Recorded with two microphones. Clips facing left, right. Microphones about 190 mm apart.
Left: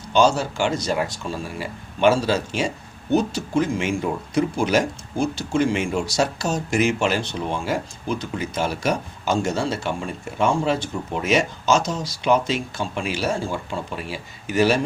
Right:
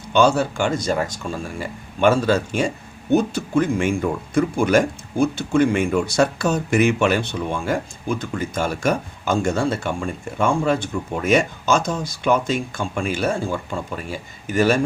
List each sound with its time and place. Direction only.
0.1 s speech: 60° right (ahead or behind)